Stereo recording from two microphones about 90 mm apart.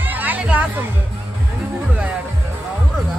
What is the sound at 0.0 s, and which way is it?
Music, 20° right (ahead or behind).